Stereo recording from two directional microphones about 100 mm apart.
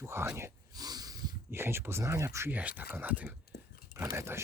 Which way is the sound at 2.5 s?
15° right (ahead or behind).